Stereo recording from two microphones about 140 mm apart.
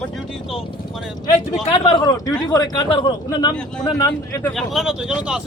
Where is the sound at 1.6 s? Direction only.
40° left (ahead or behind).